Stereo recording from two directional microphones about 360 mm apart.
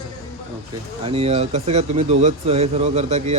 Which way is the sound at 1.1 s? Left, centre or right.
Centre.